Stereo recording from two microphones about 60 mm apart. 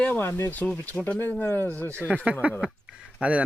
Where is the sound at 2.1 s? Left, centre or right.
Right.